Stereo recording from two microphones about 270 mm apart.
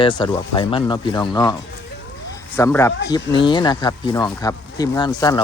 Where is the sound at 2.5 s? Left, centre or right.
Centre.